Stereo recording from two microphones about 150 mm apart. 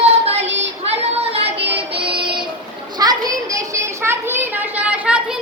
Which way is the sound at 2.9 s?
25° right (ahead or behind).